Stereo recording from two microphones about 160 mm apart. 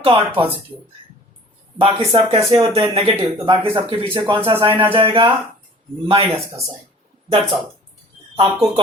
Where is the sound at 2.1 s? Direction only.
40° right (ahead or behind).